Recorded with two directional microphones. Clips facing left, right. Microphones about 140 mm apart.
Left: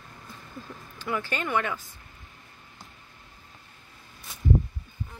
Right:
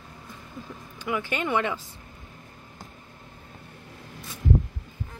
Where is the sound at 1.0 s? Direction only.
15° right (ahead or behind).